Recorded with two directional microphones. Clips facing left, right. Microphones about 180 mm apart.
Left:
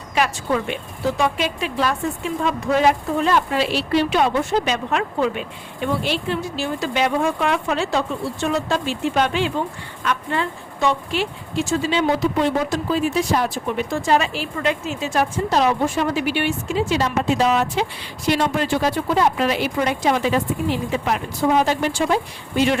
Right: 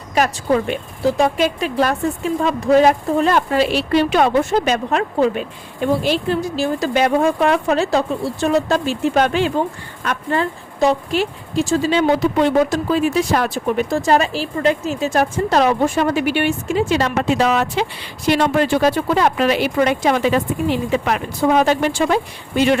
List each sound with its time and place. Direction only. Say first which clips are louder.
0.1 s speech: right 4 dB; 40° right (ahead or behind)
12.9 s speech: right 3 dB; 70° right (ahead or behind)
13.7 s speech: right 5 dB; 45° right (ahead or behind); by 22.2 s 65° right (ahead or behind)